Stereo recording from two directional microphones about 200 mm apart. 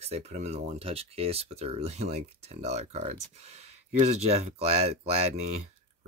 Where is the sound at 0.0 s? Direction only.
30° right (ahead or behind).